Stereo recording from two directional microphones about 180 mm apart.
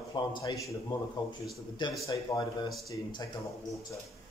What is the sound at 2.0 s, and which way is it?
Speech, 20° left (ahead or behind).